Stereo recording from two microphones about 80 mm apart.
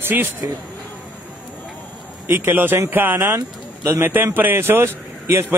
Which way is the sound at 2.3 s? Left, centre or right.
Right.